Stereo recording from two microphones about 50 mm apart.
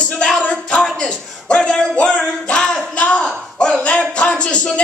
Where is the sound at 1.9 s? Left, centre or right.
Centre.